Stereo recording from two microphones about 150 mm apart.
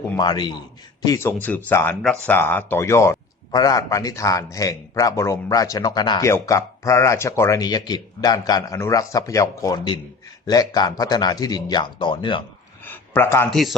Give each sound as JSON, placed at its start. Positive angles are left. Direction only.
{"t": 0.2, "sound": "a man's voice", "side_deg": 30}
{"t": 12.8, "sound": "a sound", "side_deg": 15}
{"t": 13.5, "sound": "speech", "side_deg": 0}